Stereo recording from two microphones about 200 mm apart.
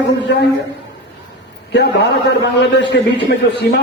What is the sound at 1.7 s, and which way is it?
A man's voice, 60° left (ahead or behind).